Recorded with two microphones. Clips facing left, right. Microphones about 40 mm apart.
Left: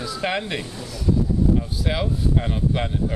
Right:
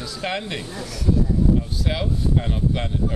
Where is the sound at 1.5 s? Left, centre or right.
Centre.